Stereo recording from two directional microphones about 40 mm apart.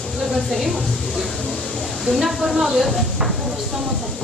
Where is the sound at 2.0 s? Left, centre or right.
Centre.